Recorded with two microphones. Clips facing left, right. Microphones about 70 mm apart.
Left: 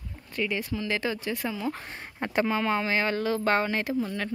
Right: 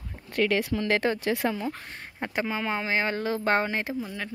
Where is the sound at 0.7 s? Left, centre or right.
Right.